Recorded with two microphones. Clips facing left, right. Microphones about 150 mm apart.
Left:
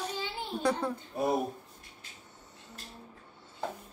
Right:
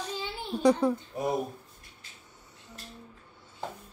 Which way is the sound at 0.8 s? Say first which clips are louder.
Right 7 dB; 15° right (ahead or behind).